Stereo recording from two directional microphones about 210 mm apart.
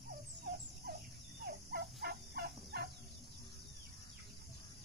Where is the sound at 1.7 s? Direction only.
50° right (ahead or behind).